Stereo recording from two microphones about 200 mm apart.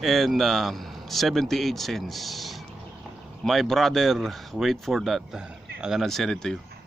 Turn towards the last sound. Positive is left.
turn(degrees=0)  # may be behind; listen again after turning